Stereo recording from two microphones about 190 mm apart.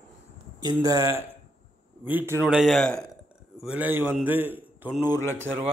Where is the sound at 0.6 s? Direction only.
20° right (ahead or behind).